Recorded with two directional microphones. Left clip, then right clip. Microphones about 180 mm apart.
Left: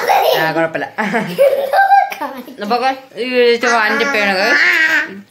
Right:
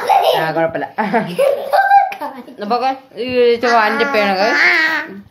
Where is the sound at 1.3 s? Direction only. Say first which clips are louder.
Left 5 dB; 35° left (ahead or behind).